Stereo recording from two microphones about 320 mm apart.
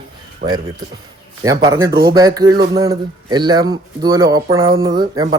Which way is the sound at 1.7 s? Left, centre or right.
Centre.